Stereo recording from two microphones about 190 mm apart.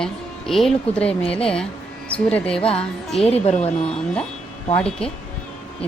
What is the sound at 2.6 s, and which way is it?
A woman's voice, 30° left (ahead or behind).